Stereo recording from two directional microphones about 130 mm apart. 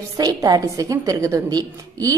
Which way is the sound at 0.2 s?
30° right (ahead or behind).